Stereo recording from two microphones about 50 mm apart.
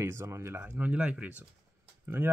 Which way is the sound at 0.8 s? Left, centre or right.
Right.